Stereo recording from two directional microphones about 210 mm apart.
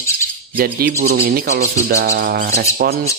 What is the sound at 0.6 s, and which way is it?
Speech, 45° right (ahead or behind).